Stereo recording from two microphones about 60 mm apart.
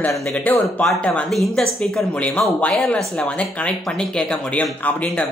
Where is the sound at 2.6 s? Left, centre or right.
Left.